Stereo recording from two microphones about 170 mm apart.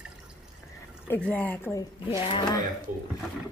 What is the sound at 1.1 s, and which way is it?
Speech, 5° left (ahead or behind).